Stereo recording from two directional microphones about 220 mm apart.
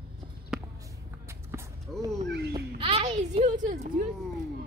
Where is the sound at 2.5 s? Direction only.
25° right (ahead or behind).